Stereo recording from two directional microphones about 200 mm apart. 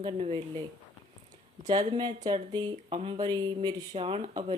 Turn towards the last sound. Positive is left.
turn(degrees=-30)  # may be behind; listen again after turning